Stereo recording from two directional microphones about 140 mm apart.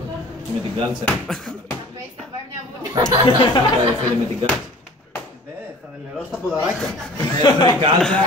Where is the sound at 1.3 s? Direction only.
Centre (ahead or behind).